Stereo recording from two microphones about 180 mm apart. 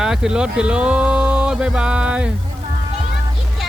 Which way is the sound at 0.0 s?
5° right (ahead or behind).